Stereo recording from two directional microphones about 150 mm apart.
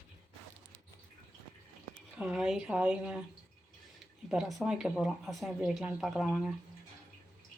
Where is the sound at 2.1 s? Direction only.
5° right (ahead or behind).